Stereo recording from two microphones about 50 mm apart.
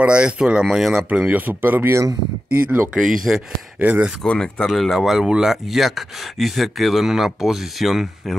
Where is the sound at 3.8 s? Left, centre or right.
Right.